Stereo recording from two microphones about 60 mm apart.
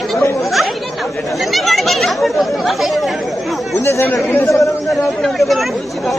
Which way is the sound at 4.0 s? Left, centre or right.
Left.